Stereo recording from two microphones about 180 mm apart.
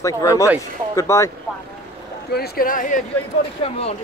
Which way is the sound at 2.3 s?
60° left (ahead or behind).